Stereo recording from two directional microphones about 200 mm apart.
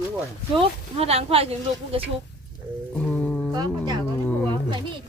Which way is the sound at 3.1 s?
5° left (ahead or behind).